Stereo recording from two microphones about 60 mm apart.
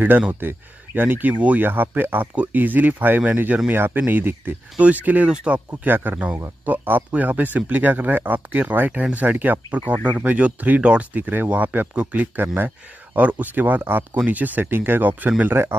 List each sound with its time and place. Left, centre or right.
0.3 s speech: right
3.7 s speech: right
4.7 s speech: right
5.9 s speech: right